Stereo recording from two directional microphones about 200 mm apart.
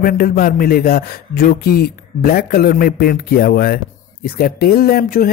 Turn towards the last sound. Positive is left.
turn(degrees=45)  # may be behind; listen again after turning